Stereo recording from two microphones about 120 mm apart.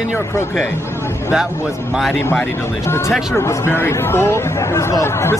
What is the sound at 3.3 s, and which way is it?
Speech, 20° left (ahead or behind).